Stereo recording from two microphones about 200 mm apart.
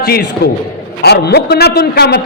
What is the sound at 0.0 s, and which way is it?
A man's voice, 50° left (ahead or behind).